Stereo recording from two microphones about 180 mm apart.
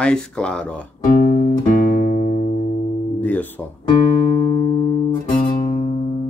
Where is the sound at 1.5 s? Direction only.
55° left (ahead or behind).